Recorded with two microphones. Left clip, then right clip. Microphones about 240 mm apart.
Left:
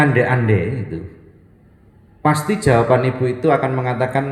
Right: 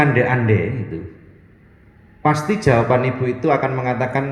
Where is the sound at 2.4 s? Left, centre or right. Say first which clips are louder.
Left 3 dB; left.